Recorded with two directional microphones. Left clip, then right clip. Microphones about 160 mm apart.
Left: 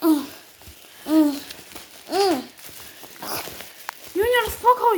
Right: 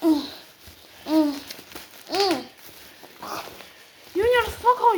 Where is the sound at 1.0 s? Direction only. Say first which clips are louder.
Left 3 dB; 60° left (ahead or behind).